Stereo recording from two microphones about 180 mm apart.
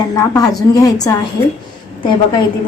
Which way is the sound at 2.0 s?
25° left (ahead or behind).